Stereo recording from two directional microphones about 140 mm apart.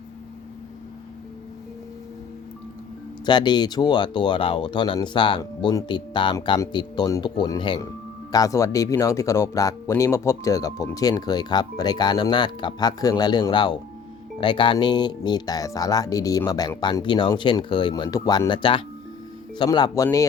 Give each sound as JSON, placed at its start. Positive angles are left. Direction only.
{"t": 3.2, "sound": "speech", "side_deg": 30}